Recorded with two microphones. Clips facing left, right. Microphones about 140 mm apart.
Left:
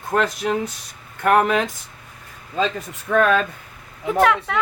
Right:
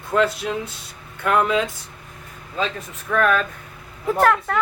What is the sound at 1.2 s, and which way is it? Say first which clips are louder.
Speech: left 2 dB; 60° left (ahead or behind).